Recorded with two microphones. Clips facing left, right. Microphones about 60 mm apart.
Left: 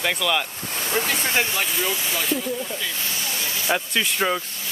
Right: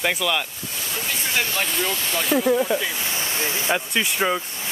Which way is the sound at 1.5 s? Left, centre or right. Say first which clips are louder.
Even; centre.